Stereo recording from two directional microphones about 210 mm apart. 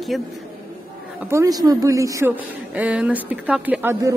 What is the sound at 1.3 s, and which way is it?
A woman's voice, 15° right (ahead or behind).